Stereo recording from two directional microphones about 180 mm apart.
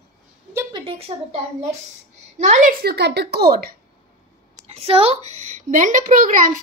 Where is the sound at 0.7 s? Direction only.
30° right (ahead or behind).